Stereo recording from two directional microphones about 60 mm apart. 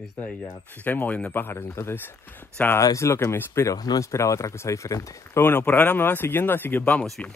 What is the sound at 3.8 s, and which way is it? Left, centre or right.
Speech, left.